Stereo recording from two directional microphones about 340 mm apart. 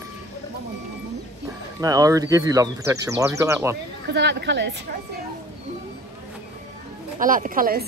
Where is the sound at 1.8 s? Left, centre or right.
Centre.